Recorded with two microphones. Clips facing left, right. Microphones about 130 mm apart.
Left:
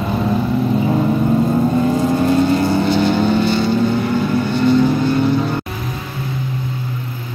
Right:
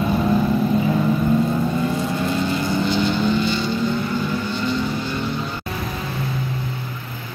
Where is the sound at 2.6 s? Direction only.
55° left (ahead or behind).